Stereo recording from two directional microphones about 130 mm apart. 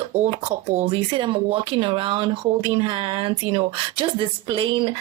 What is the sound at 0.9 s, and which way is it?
Speech, 40° right (ahead or behind).